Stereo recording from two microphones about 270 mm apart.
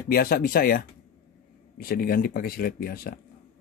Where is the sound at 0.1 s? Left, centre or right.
Left.